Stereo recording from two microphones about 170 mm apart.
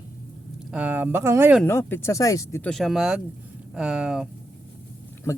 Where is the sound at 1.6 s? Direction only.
15° left (ahead or behind).